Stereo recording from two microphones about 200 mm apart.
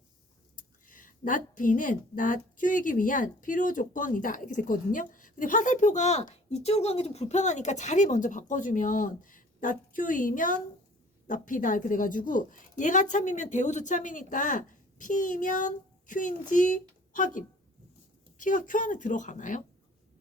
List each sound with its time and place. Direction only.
0.9 s a woman's voice: 40° left (ahead or behind)